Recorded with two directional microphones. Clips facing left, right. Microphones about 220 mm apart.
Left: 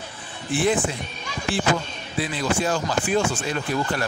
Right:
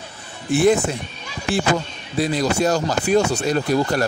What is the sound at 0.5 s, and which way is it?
Speech, 45° right (ahead or behind).